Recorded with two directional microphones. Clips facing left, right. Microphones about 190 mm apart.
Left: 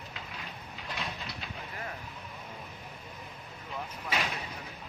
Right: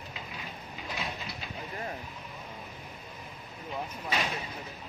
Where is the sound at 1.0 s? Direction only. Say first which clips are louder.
Right 1 dB; 5° right (ahead or behind).